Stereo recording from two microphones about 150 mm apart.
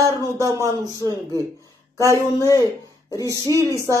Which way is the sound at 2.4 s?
20° left (ahead or behind).